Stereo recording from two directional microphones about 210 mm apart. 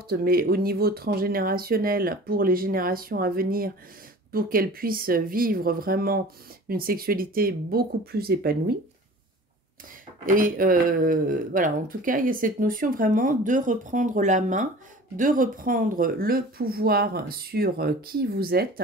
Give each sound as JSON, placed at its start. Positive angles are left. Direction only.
{"t": 0.1, "sound": "speech", "side_deg": -45}
{"t": 10.2, "sound": "speech", "side_deg": -40}